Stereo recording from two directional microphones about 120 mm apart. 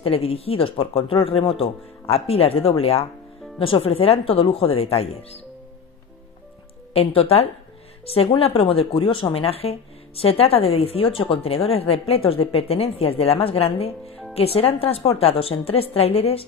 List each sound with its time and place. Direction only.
0.0 s speech: 50° left (ahead or behind)
6.9 s speech: 55° left (ahead or behind)